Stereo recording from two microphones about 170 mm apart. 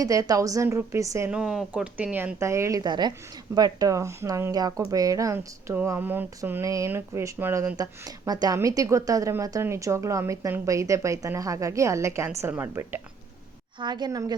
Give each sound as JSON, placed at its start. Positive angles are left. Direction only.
{"t": 0.0, "sound": "a woman's voice", "side_deg": -20}
{"t": 1.3, "sound": "a woman's voice", "side_deg": -5}
{"t": 13.7, "sound": "a woman's voice", "side_deg": -25}